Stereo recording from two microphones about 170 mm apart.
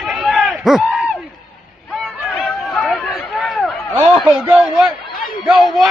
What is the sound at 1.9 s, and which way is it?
Chatter, centre (ahead or behind).